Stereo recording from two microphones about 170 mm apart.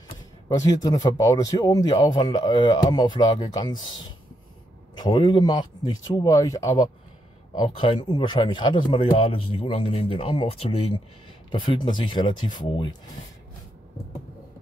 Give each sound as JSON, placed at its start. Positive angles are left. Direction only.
{"t": 0.8, "sound": "speech", "side_deg": 20}
{"t": 4.9, "sound": "speech", "side_deg": 25}
{"t": 7.5, "sound": "speech", "side_deg": 30}